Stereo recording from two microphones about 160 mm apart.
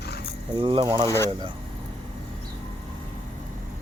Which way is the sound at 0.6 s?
30° right (ahead or behind).